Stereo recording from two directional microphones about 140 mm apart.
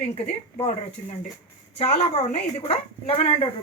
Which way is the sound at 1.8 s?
50° left (ahead or behind).